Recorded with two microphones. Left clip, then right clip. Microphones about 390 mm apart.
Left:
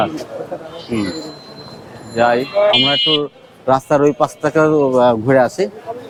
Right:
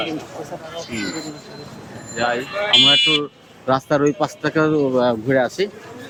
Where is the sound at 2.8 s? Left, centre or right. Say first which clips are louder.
Even; left.